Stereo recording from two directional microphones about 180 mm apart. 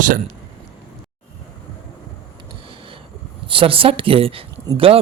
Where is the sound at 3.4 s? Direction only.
30° right (ahead or behind).